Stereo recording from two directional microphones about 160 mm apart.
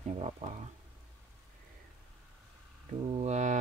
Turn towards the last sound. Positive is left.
turn(degrees=-50)  # may be behind; listen again after turning